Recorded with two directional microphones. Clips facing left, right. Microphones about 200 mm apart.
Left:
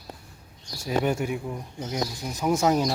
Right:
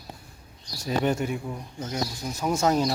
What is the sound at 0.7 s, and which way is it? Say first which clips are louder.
Speech: even; 10° left (ahead or behind).